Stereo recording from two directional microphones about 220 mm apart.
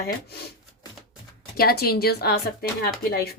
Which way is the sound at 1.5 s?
45° left (ahead or behind).